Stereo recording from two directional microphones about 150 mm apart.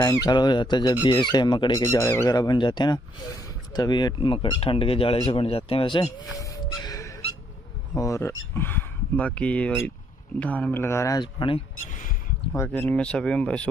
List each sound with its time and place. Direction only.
0.0 s speech: 25° left (ahead or behind)
6.3 s gasp: 20° left (ahead or behind)
7.9 s speech: 20° left (ahead or behind)
11.9 s a sound: 65° left (ahead or behind)
12.5 s speech: 10° left (ahead or behind)